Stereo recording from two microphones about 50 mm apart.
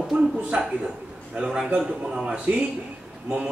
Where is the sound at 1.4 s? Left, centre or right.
Centre.